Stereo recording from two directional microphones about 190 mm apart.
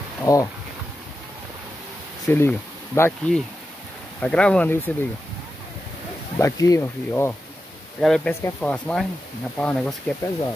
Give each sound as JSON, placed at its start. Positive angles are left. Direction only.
{"t": 0.2, "sound": "speech", "side_deg": 15}
{"t": 2.2, "sound": "speech", "side_deg": 10}
{"t": 6.3, "sound": "speech", "side_deg": 15}